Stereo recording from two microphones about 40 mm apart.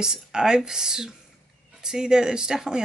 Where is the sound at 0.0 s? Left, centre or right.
Centre.